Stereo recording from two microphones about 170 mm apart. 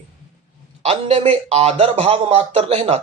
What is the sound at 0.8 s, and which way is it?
A man's voice, 40° right (ahead or behind).